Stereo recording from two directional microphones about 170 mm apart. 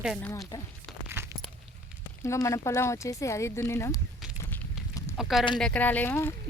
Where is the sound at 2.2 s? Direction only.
15° left (ahead or behind).